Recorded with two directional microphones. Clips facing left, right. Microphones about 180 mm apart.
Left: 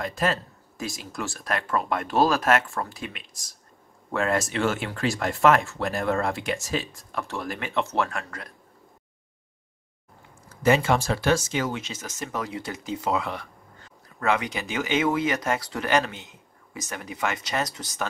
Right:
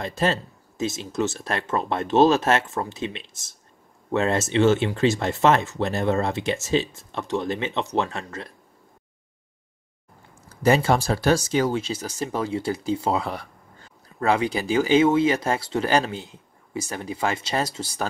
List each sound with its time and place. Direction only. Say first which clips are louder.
0.0 s speech: right 2 dB; 25° right (ahead or behind)
10.6 s speech: right 2 dB; 35° right (ahead or behind)